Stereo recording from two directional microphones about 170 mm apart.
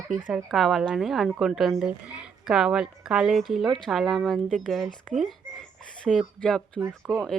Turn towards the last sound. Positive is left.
turn(degrees=0)  # may be behind; listen again after turning